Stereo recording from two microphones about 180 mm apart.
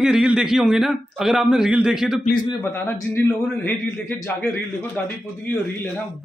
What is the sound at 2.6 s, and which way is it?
A man's voice, 15° left (ahead or behind).